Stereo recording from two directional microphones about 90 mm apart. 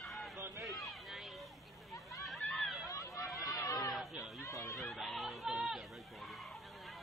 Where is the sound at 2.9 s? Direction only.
40° left (ahead or behind).